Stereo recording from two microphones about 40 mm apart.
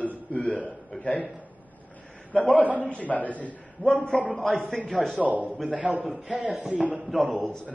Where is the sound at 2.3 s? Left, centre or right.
Left.